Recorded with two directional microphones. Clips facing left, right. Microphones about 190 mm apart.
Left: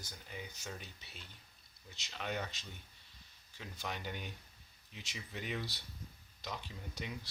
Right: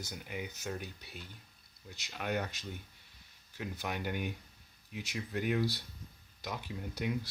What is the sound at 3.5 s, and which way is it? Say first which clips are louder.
Speech: right 6 dB; 10° right (ahead or behind).